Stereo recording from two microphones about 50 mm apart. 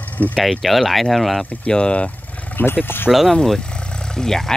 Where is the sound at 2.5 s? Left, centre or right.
Left.